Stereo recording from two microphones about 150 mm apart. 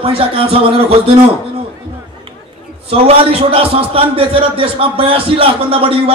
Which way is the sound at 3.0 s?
40° right (ahead or behind).